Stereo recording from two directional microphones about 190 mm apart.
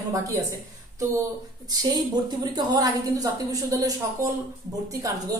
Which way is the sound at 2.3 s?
20° right (ahead or behind).